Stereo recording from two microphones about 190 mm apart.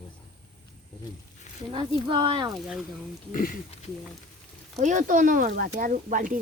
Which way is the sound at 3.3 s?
45° left (ahead or behind).